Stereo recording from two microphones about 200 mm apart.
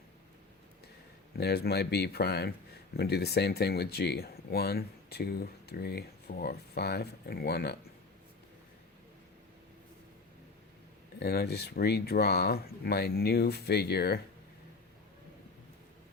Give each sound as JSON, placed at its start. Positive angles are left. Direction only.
{"t": 1.4, "sound": "speech", "side_deg": 55}
{"t": 11.2, "sound": "speech", "side_deg": 50}